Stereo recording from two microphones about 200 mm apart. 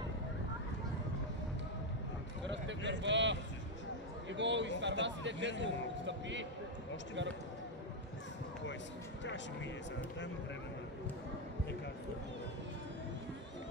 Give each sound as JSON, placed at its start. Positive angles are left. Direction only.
{"t": 2.4, "sound": "a sound", "side_deg": -65}
{"t": 4.3, "sound": "a man's voice", "side_deg": -65}
{"t": 9.2, "sound": "speech", "side_deg": 65}